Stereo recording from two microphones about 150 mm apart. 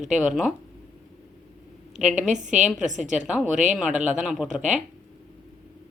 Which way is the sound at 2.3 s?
55° right (ahead or behind).